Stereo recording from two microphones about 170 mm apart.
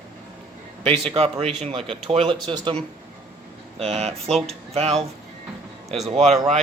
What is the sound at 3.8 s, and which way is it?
Speech, 40° right (ahead or behind).